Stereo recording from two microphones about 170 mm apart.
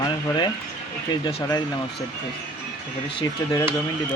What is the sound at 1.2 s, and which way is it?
Speech, 25° left (ahead or behind).